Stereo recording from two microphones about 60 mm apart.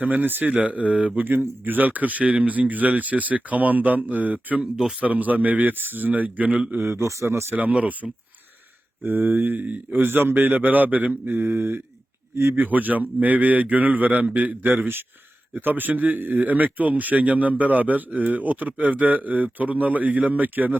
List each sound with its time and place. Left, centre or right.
0.0 s a man's voice: right
4.6 s speech: centre
4.9 s a man's voice: right
6.7 s a man's voice: right
7.1 s a man's voice: right
7.5 s a man's voice: right
9.0 s a man's voice: right